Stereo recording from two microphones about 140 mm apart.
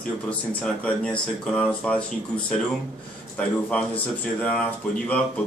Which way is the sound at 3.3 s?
10° left (ahead or behind).